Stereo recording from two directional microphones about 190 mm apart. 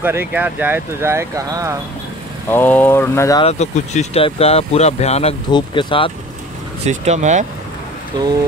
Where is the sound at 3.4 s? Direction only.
35° left (ahead or behind).